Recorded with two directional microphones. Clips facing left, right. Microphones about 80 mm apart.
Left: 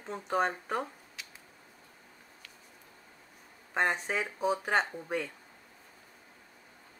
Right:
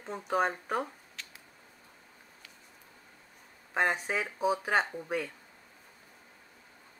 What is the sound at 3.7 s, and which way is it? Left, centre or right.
Speech, centre.